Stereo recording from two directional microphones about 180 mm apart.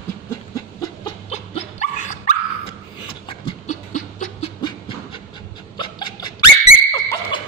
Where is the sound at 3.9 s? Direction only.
45° left (ahead or behind).